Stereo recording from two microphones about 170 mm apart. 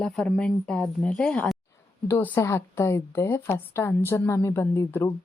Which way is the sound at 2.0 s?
15° left (ahead or behind).